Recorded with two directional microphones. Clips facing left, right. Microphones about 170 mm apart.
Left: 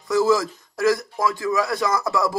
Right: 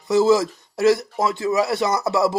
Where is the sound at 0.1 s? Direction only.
25° right (ahead or behind).